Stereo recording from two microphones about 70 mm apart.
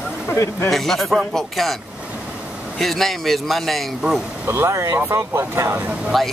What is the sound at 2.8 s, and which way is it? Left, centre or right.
Speech, centre.